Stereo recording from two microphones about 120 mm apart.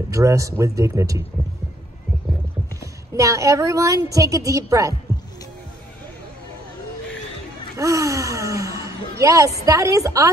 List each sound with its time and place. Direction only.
0.1 s speech: 25° right (ahead or behind)
3.2 s speech: 25° right (ahead or behind)
7.7 s speech: 25° right (ahead or behind)